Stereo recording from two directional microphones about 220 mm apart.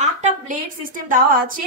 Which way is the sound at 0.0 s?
30° right (ahead or behind).